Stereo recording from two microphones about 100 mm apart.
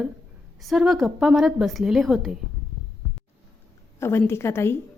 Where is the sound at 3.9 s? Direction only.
25° left (ahead or behind).